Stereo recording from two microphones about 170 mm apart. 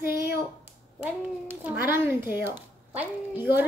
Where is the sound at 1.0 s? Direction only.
10° right (ahead or behind).